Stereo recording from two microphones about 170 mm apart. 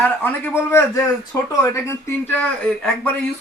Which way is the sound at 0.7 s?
15° left (ahead or behind).